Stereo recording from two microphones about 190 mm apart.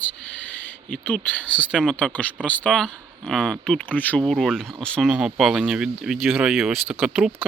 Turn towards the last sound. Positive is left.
turn(degrees=-5)  # may be behind; listen again after turning